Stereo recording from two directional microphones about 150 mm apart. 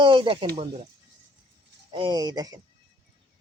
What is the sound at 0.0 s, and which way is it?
Speech, 30° right (ahead or behind).